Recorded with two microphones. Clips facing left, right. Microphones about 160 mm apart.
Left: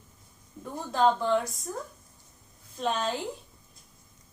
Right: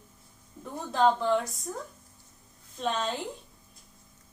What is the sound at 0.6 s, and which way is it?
Speech, centre (ahead or behind).